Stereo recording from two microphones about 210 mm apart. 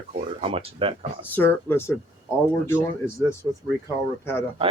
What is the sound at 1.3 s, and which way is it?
Speech, 10° left (ahead or behind).